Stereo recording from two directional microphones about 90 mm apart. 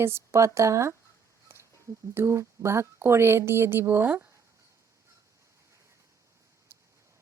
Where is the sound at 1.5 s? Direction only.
25° right (ahead or behind).